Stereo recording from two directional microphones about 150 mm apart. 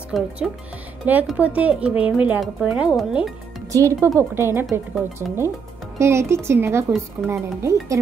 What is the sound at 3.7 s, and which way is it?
Speech, 20° right (ahead or behind).